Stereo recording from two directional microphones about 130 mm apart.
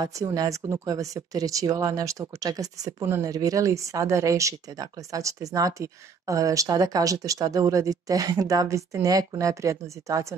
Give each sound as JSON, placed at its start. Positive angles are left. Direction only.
{"t": 0.0, "sound": "speech", "side_deg": -25}